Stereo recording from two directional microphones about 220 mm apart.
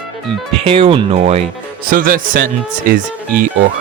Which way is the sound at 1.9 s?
40° right (ahead or behind).